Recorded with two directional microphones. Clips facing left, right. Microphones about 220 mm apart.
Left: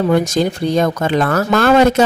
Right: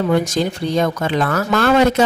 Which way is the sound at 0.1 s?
45° left (ahead or behind).